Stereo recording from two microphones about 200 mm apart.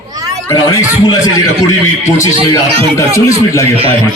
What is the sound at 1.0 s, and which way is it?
Speech, 20° left (ahead or behind).